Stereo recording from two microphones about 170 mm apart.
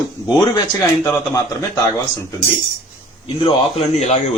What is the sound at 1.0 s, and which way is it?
A man's voice, 15° left (ahead or behind).